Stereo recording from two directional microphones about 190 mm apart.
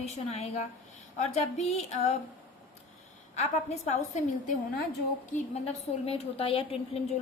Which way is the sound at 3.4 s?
40° left (ahead or behind).